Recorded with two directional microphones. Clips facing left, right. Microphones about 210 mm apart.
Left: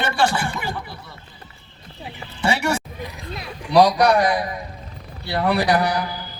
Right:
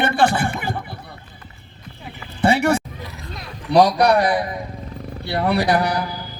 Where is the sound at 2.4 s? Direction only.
55° right (ahead or behind).